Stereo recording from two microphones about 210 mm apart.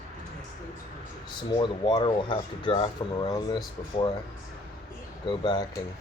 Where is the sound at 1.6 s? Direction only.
20° left (ahead or behind).